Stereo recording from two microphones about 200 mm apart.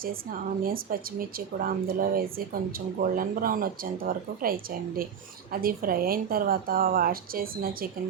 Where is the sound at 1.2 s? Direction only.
45° right (ahead or behind).